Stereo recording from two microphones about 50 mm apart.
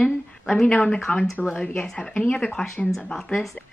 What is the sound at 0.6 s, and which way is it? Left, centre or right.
Speech, left.